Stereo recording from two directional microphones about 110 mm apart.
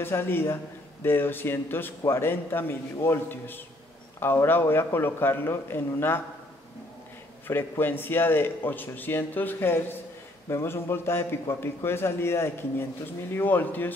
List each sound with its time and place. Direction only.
0.0 s a man's voice: 20° left (ahead or behind)
7.4 s a man's voice: 20° left (ahead or behind)